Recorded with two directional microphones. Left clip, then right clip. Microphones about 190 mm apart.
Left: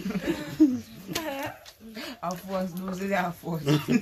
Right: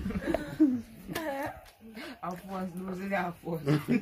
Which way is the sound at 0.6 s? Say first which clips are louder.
Left 5 dB; 5° left (ahead or behind).